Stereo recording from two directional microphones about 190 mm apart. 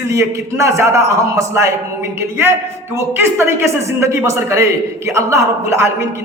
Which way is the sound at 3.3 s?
15° right (ahead or behind).